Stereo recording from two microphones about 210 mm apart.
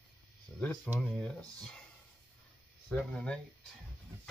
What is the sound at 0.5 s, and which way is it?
Speech, 5° left (ahead or behind).